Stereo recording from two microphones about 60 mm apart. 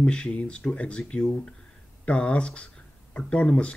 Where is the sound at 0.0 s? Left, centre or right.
Centre.